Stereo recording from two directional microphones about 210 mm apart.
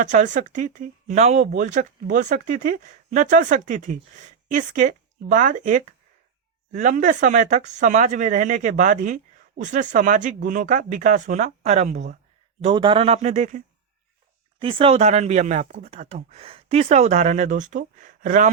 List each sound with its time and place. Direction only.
0.0 s speech: 35° right (ahead or behind)
12.6 s a man's voice: 25° right (ahead or behind)
14.6 s speech: 25° right (ahead or behind)